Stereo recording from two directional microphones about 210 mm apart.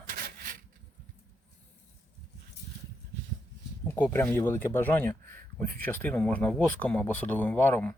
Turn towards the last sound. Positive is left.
turn(degrees=10)  # may be behind; listen again after turning